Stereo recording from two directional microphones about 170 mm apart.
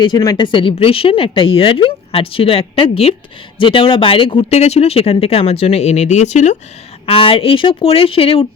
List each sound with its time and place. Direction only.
0.0 s speech: 25° left (ahead or behind)